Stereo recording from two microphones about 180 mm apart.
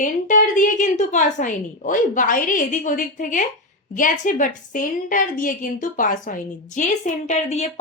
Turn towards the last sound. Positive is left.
turn(degrees=40)  # may be behind; listen again after turning